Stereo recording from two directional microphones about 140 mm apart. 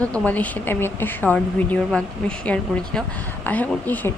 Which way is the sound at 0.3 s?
10° left (ahead or behind).